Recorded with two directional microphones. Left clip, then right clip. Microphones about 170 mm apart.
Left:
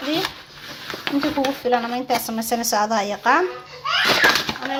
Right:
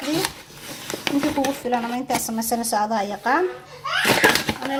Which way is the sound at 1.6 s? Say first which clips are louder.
Left 3 dB; 5° left (ahead or behind).